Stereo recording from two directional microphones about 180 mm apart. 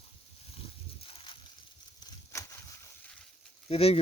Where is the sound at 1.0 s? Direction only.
30° left (ahead or behind).